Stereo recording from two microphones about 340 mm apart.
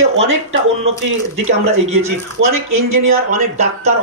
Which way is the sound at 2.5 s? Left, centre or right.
Right.